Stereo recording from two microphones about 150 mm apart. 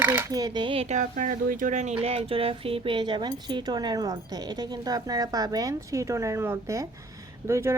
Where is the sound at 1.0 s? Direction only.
60° right (ahead or behind).